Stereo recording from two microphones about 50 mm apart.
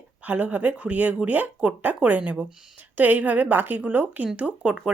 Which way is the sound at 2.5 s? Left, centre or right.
Centre.